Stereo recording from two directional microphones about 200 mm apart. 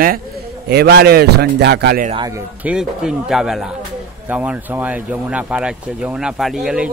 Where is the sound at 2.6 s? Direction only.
5° right (ahead or behind).